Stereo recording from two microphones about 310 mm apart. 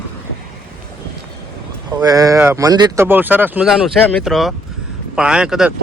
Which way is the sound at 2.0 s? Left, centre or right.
Centre.